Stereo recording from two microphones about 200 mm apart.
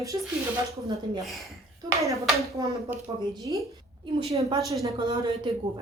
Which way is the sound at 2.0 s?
15° right (ahead or behind).